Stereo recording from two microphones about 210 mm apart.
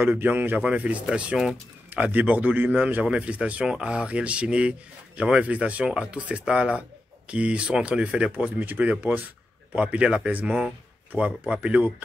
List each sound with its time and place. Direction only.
0.0 s speech: 10° right (ahead or behind)